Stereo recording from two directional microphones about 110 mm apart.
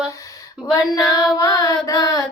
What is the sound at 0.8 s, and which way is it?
Child singing, 35° left (ahead or behind).